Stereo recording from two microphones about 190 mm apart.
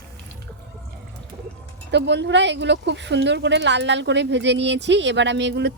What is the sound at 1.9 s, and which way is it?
Speech, 65° right (ahead or behind).